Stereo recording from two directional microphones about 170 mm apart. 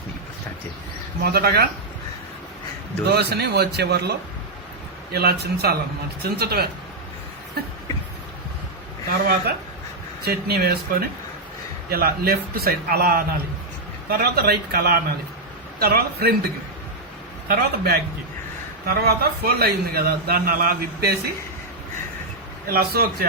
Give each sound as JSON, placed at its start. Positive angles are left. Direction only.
{"t": 1.2, "sound": "speech", "side_deg": -65}
{"t": 3.1, "sound": "speech", "side_deg": -75}
{"t": 5.1, "sound": "speech", "side_deg": -70}
{"t": 9.0, "sound": "a man's voice", "side_deg": -60}
{"t": 11.9, "sound": "a man's voice", "side_deg": -65}
{"t": 17.5, "sound": "a man's voice", "side_deg": -65}
{"t": 22.6, "sound": "a man's voice", "side_deg": -65}